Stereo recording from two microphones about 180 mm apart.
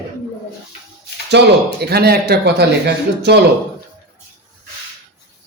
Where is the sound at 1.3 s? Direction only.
65° right (ahead or behind).